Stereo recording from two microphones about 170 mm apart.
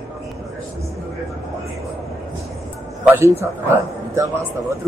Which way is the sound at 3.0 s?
10° right (ahead or behind).